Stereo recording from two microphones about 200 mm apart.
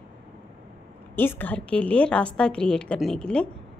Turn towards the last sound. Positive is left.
turn(degrees=5)  # may be behind; listen again after turning